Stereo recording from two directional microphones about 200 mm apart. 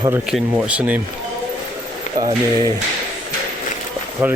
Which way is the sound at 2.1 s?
35° left (ahead or behind).